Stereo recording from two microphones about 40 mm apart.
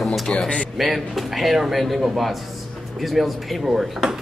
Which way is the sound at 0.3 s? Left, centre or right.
Centre.